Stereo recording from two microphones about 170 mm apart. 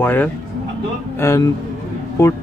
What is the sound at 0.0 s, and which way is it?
Speech, 10° left (ahead or behind).